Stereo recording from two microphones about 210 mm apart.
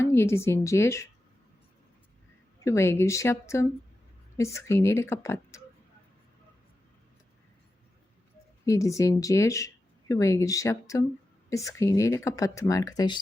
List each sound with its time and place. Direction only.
0.0 s speech: 10° left (ahead or behind)
2.6 s speech: 15° left (ahead or behind)
8.6 s speech: 15° left (ahead or behind)